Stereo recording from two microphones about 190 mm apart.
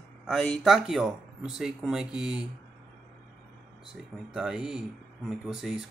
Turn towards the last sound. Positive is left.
turn(degrees=0)  # may be behind; listen again after turning